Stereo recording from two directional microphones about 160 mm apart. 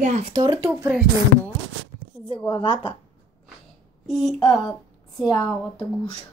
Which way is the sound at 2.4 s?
30° left (ahead or behind).